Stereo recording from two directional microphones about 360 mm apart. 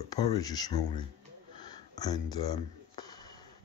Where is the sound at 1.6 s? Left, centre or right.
Centre.